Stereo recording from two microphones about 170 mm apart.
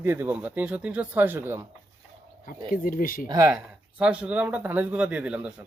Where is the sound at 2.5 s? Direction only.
55° left (ahead or behind).